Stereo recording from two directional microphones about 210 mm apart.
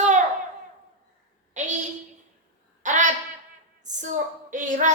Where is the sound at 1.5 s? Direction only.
35° right (ahead or behind).